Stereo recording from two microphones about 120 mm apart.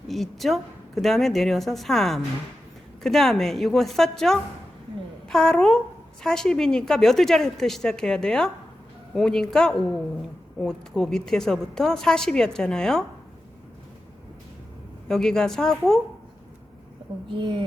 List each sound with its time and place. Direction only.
0.1 s a woman's voice: centre (ahead or behind)
15.0 s a woman's voice: 5° left (ahead or behind)
17.2 s a woman's voice: 45° right (ahead or behind)